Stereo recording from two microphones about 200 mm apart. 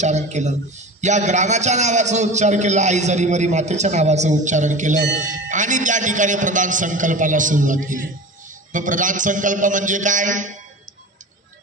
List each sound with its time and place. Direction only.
0.0 s a man's voice: 35° right (ahead or behind)